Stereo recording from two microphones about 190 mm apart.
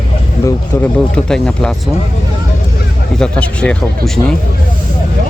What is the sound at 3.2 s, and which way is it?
Speech, 5° left (ahead or behind).